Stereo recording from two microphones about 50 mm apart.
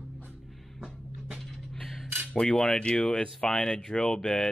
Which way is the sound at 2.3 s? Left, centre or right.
Centre.